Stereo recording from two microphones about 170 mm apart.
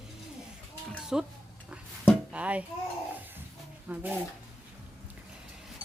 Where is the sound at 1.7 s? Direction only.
5° right (ahead or behind).